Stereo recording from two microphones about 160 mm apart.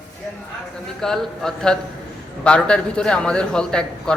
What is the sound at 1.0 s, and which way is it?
A man's voice, centre (ahead or behind).